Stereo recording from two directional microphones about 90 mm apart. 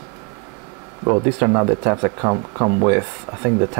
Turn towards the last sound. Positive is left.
turn(degrees=-20)  # may be behind; listen again after turning